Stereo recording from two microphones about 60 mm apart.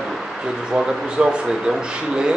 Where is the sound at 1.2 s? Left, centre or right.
Centre.